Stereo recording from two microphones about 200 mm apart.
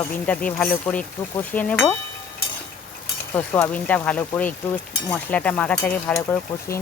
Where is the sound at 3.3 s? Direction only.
10° left (ahead or behind).